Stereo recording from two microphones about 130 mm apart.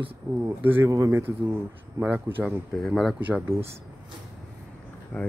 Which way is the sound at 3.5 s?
45° right (ahead or behind).